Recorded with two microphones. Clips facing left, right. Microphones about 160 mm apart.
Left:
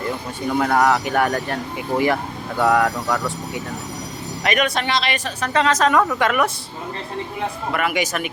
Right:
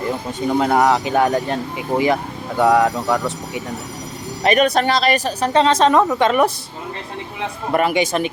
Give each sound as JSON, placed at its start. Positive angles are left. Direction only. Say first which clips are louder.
{"t": 0.6, "sound": "speech", "louder": "right 1 dB", "side_deg": -20}
{"t": 4.4, "sound": "a woman's voice", "louder": "right 6 dB", "side_deg": -35}
{"t": 7.7, "sound": "speech", "louder": "right 6 dB", "side_deg": -35}